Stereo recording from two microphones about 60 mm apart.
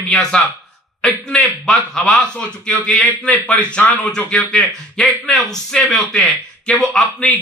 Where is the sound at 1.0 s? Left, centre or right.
Centre.